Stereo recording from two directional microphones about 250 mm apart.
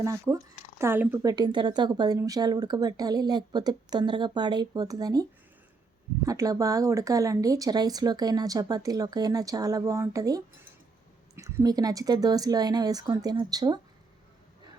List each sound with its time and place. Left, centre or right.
0.0 s a woman's voice: centre
6.2 s a woman's voice: centre